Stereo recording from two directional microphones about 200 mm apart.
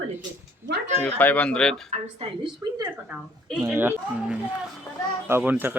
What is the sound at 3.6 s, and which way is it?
Speech, 10° right (ahead or behind).